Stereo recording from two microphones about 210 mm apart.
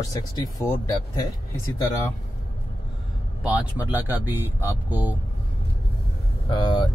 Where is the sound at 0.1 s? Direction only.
15° left (ahead or behind).